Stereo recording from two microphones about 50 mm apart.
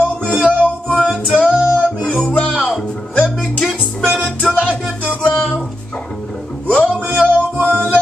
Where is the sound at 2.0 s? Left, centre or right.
Left.